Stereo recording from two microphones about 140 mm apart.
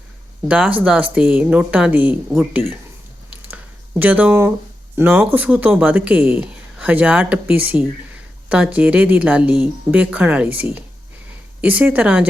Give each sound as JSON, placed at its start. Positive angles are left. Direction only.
{"t": 0.4, "sound": "speech", "side_deg": -10}
{"t": 3.5, "sound": "a sound", "side_deg": -10}
{"t": 4.9, "sound": "speech", "side_deg": -15}